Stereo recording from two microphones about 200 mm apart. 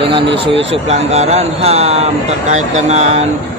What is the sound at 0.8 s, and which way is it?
Speech, 35° right (ahead or behind).